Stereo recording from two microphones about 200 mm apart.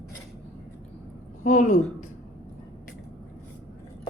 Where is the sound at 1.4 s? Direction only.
40° left (ahead or behind).